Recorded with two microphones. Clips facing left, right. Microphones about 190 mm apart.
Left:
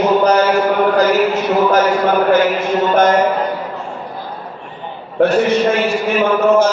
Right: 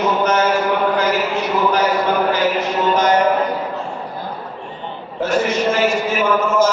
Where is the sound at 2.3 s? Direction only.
50° left (ahead or behind).